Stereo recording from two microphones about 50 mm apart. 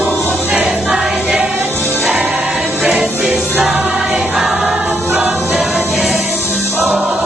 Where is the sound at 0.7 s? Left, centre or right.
Centre.